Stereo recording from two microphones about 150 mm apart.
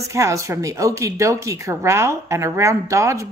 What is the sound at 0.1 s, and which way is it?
Speech, 20° right (ahead or behind).